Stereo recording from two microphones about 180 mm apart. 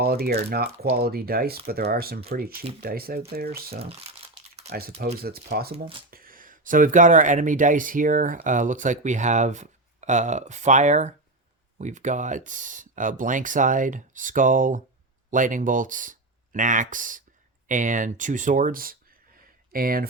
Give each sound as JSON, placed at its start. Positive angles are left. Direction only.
{"t": 0.0, "sound": "speech", "side_deg": -60}
{"t": 4.1, "sound": "crumpling", "side_deg": -35}
{"t": 5.2, "sound": "speech", "side_deg": -60}